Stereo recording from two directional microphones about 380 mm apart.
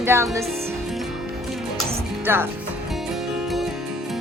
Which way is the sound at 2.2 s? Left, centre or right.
Centre.